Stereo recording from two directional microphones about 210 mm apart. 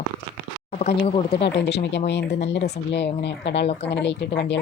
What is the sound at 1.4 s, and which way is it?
Speech, 55° left (ahead or behind).